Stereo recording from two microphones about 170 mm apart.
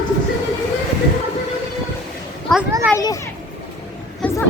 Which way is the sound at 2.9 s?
20° left (ahead or behind).